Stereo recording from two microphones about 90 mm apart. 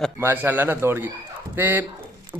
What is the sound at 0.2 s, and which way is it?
A man's voice, 25° right (ahead or behind).